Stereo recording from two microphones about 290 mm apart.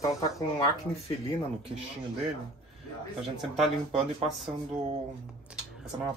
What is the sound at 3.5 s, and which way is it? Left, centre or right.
Speech, centre.